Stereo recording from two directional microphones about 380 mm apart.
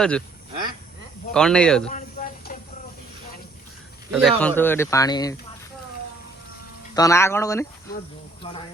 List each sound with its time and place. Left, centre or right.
1.3 s speech: centre
1.9 s a sound: centre
4.1 s speech: centre
6.9 s speech: centre